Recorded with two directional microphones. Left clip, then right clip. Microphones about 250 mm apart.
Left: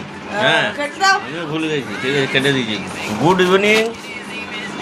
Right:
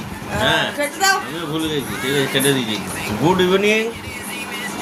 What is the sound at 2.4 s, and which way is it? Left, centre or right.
Speech, centre.